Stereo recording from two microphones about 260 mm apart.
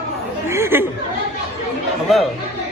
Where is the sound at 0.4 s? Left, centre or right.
Centre.